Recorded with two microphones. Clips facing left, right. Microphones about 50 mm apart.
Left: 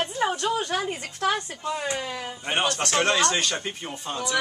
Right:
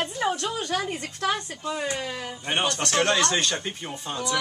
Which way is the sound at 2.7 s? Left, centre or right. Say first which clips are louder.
Even; left.